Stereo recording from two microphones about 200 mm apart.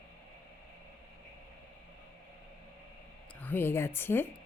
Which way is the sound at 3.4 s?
10° left (ahead or behind).